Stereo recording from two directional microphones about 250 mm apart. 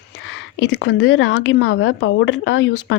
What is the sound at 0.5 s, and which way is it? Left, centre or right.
A woman's voice, left.